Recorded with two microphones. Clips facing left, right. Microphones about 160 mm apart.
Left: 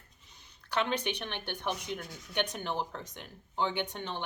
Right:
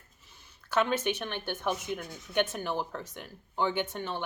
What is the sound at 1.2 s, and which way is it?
A woman's voice, 45° right (ahead or behind).